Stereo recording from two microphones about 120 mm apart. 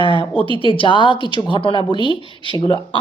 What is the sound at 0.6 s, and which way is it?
Speech, 45° left (ahead or behind).